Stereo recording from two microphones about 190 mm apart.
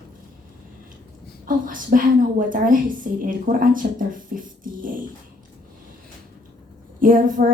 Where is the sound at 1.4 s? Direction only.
45° right (ahead or behind).